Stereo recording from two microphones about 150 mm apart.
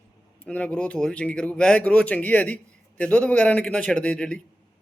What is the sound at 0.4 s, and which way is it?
Speech, 10° left (ahead or behind).